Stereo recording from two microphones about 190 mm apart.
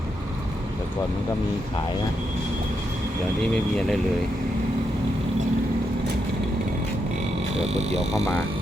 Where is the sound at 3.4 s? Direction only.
5° left (ahead or behind).